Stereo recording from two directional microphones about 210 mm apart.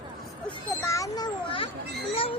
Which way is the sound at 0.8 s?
15° left (ahead or behind).